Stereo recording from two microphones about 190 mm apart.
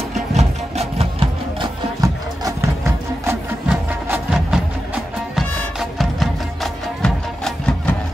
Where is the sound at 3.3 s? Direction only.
5° right (ahead or behind).